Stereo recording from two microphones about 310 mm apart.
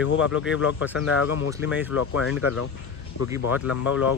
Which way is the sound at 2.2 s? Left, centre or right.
Left.